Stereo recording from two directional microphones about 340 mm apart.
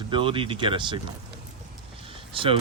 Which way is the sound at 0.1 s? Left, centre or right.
Centre.